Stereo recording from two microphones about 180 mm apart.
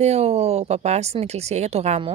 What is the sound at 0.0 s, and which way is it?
Speech, 35° right (ahead or behind).